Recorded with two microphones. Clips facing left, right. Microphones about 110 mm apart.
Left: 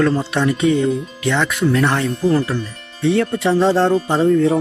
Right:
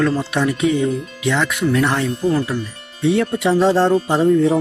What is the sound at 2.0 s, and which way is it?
Speech, centre (ahead or behind).